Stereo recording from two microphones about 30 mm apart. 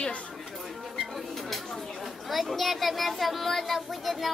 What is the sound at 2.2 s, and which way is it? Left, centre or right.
Speech, centre.